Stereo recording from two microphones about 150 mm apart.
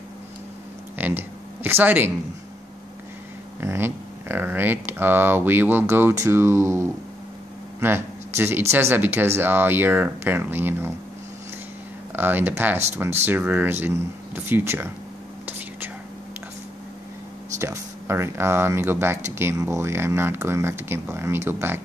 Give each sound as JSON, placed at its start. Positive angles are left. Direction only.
{"t": 0.9, "sound": "a sound", "side_deg": -10}
{"t": 3.6, "sound": "speech", "side_deg": -15}
{"t": 12.2, "sound": "speech", "side_deg": -15}
{"t": 17.6, "sound": "speech", "side_deg": -20}